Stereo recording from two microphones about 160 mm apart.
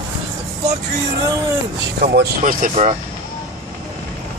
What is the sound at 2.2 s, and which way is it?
Speech, 75° right (ahead or behind).